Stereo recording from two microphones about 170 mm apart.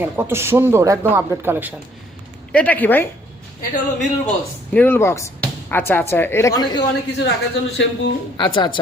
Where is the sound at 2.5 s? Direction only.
10° left (ahead or behind).